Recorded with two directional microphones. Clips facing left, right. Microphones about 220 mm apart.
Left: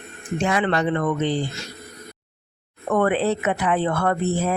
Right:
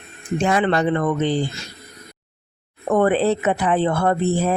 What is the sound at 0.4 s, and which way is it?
Speech, 35° right (ahead or behind).